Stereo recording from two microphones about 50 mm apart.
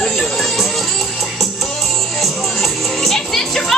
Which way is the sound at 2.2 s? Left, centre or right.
Centre.